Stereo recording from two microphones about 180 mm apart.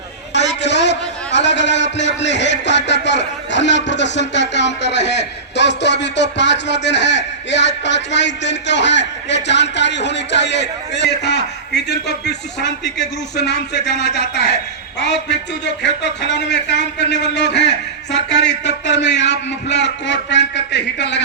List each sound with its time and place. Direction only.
0.3 s a man's voice: 75° left (ahead or behind)